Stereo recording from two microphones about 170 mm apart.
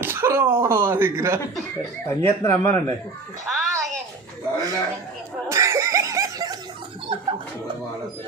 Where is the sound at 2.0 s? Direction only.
15° left (ahead or behind).